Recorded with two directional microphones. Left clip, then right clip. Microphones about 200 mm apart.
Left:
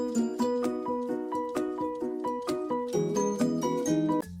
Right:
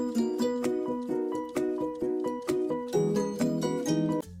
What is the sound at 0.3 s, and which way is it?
Music, 5° right (ahead or behind).